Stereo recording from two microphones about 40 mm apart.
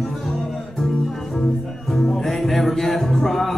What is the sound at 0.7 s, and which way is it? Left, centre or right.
Music, centre.